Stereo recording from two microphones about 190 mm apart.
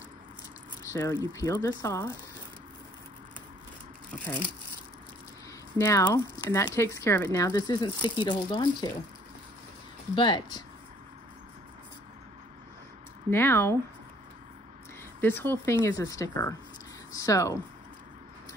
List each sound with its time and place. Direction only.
0.9 s speech: 20° left (ahead or behind)
5.8 s speech: 15° left (ahead or behind)
10.1 s speech: 25° left (ahead or behind)
13.3 s speech: 10° left (ahead or behind)
15.1 s speech: 10° left (ahead or behind)